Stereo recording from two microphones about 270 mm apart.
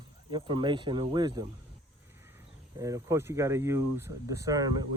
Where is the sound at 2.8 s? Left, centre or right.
Centre.